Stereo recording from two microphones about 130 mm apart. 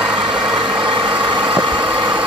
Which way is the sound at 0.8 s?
40° right (ahead or behind).